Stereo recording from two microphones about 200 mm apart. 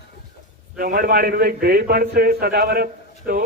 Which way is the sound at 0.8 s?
45° right (ahead or behind).